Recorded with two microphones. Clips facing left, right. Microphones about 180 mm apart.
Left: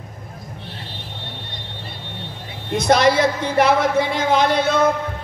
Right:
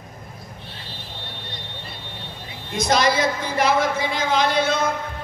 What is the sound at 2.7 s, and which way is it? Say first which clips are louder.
A woman's voice: left 4 dB; 60° left (ahead or behind).